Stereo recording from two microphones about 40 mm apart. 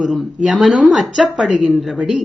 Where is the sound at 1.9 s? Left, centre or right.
Right.